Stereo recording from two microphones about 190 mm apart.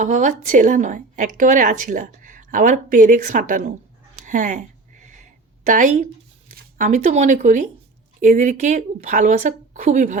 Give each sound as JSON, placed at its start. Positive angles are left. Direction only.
{"t": 0.0, "sound": "a woman's voice", "side_deg": -40}
{"t": 4.3, "sound": "a sound", "side_deg": -40}
{"t": 5.6, "sound": "a woman's voice", "side_deg": -40}